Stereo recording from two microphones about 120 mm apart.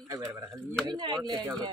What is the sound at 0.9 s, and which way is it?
Speech, 40° right (ahead or behind).